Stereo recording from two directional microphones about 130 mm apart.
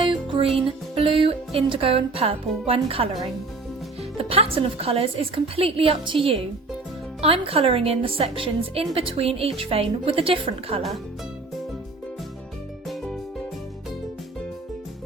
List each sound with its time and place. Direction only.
0.0 s music: 40° right (ahead or behind)
1.2 s a woman's voice: 45° right (ahead or behind)
4.2 s a woman's voice: 50° right (ahead or behind)